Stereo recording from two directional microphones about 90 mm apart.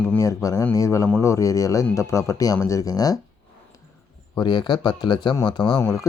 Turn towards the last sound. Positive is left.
turn(degrees=35)  # may be behind; listen again after turning